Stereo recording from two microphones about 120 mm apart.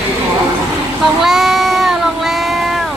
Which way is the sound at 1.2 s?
5° right (ahead or behind).